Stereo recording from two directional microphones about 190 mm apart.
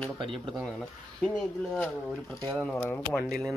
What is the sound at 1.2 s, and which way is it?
Speech, 5° left (ahead or behind).